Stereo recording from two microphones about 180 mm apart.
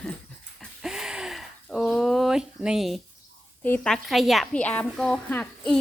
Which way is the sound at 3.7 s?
5° left (ahead or behind).